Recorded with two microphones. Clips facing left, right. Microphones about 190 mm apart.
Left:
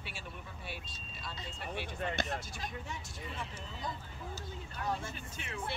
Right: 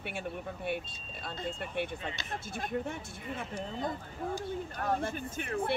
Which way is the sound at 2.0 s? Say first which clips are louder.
Left 5 dB; 55° left (ahead or behind).